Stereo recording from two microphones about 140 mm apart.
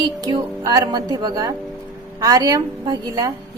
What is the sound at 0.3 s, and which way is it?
A woman's voice, 25° right (ahead or behind).